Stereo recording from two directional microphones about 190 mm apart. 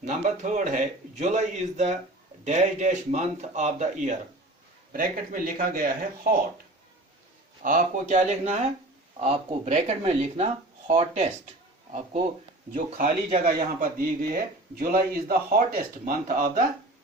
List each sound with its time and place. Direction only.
0.0 s speech: 40° right (ahead or behind)
7.6 s speech: 40° right (ahead or behind)
13.4 s speech: 45° right (ahead or behind)